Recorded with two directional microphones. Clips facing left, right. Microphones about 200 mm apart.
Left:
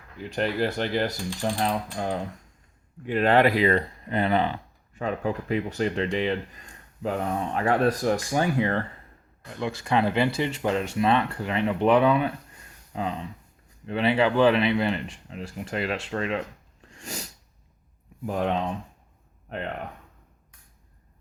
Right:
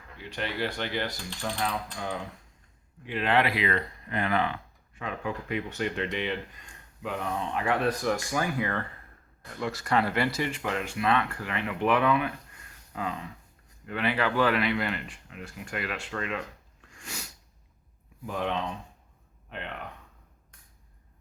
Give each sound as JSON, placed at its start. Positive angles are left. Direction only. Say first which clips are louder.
{"t": 0.2, "sound": "speech", "louder": "left 6 dB", "side_deg": 40}
{"t": 17.0, "sound": "sneeze", "louder": "left 5 dB", "side_deg": 35}
{"t": 18.3, "sound": "speech", "louder": "left 5 dB", "side_deg": 40}